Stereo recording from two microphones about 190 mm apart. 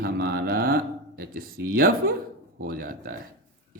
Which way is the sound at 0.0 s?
55° right (ahead or behind).